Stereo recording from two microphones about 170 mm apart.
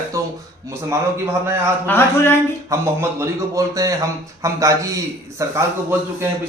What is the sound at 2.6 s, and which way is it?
A man's voice, 15° right (ahead or behind).